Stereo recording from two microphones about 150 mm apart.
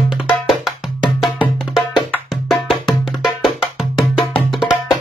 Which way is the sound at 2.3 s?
Centre (ahead or behind).